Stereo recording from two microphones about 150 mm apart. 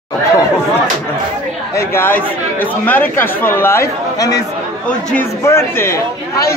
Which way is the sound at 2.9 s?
15° left (ahead or behind).